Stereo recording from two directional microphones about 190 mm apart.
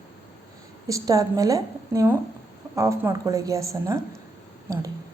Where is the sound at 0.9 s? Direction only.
20° right (ahead or behind).